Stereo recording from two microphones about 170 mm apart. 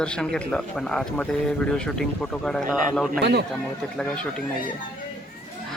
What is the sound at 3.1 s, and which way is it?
Speech, 75° right (ahead or behind).